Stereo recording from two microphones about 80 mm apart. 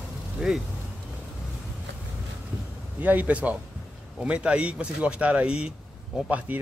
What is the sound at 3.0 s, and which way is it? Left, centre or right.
Speech, right.